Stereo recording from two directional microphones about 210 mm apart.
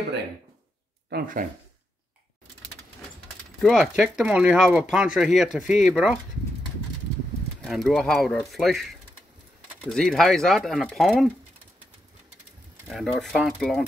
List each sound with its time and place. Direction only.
1.1 s speech: 40° right (ahead or behind)
3.6 s speech: centre (ahead or behind)
7.6 s speech: centre (ahead or behind)
12.8 s speech: centre (ahead or behind)